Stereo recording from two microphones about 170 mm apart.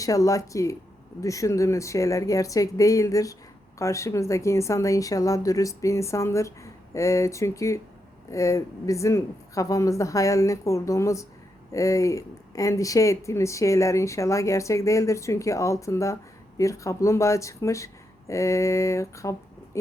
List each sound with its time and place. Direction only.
0.0 s speech: 20° left (ahead or behind)